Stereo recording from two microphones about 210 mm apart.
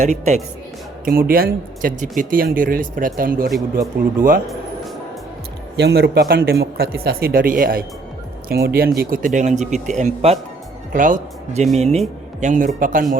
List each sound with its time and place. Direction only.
0.0 s speech: 35° right (ahead or behind)
1.0 s speech: 45° right (ahead or behind)
5.7 s speech: 50° right (ahead or behind)